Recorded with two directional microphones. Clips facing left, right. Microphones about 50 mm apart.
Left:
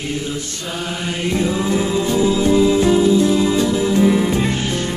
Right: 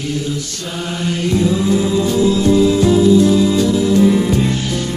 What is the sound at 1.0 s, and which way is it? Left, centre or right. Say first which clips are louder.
Music: right 4 dB; centre.